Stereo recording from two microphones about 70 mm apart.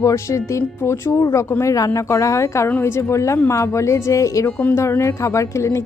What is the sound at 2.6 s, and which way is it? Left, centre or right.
Speech, left.